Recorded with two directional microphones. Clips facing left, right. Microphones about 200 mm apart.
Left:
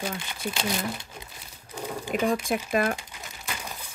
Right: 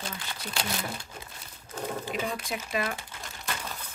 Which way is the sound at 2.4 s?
50° left (ahead or behind).